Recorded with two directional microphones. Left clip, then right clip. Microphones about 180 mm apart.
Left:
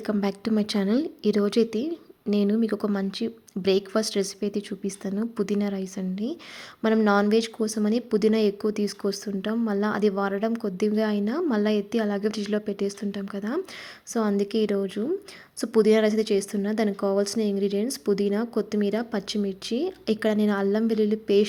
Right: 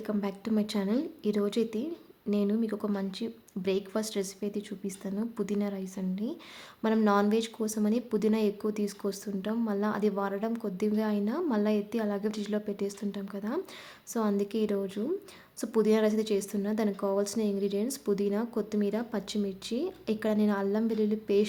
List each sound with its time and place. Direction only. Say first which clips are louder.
0.0 s a woman's voice: left 6 dB; 25° left (ahead or behind)